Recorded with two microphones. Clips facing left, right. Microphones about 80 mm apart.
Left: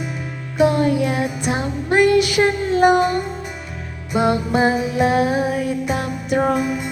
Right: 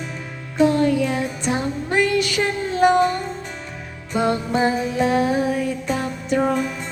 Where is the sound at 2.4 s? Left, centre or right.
Centre.